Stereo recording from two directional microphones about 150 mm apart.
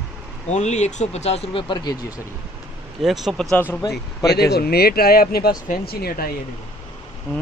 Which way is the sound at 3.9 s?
90° left.